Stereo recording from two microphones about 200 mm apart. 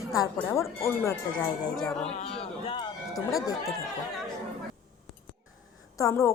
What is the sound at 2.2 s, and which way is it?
Speech, 30° left (ahead or behind).